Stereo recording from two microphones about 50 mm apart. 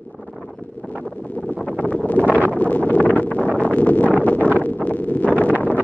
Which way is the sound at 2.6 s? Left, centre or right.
Left.